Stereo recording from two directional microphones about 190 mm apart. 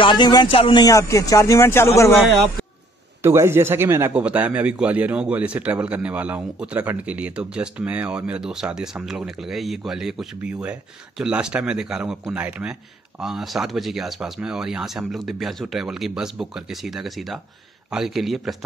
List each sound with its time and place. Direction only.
0.0 s speech: 25° left (ahead or behind)
3.2 s speech: 15° right (ahead or behind)